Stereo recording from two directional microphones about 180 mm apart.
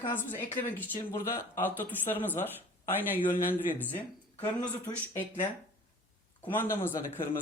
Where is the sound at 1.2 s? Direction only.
50° left (ahead or behind).